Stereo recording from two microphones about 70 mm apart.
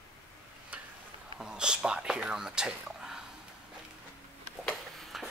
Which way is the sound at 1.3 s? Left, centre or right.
Centre.